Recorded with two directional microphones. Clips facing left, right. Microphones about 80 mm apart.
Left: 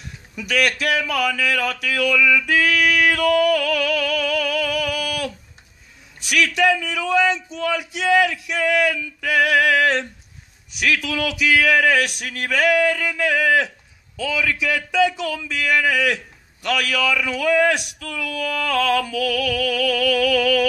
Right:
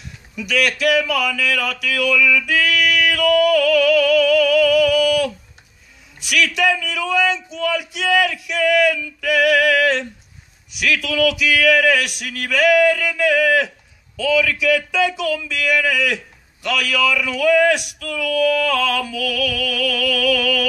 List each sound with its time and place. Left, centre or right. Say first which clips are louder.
0.4 s speech: right 2 dB; left